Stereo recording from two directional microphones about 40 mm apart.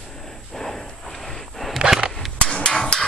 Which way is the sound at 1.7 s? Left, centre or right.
Centre.